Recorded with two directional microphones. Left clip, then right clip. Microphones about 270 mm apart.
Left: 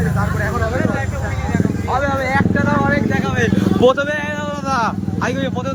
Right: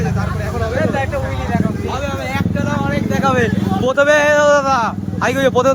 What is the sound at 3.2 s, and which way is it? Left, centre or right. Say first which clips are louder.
Vehicle: right 4 dB; centre.